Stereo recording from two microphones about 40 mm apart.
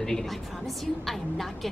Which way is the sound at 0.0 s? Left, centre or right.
Centre.